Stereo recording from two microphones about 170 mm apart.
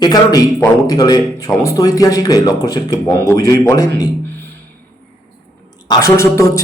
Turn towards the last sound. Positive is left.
turn(degrees=20)  # may be behind; listen again after turning